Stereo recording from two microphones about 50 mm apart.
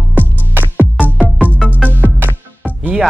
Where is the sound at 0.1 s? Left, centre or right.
Right.